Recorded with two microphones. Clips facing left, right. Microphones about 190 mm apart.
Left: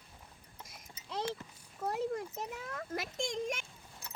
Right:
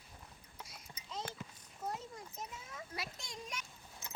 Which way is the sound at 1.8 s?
65° left (ahead or behind).